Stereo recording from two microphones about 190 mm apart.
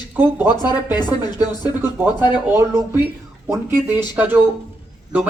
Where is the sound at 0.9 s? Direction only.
20° left (ahead or behind).